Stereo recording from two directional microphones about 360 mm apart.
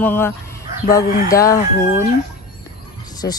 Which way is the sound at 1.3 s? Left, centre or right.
Centre.